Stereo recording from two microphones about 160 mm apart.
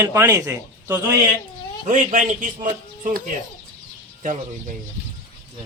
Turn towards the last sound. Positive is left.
turn(degrees=-55)  # may be behind; listen again after turning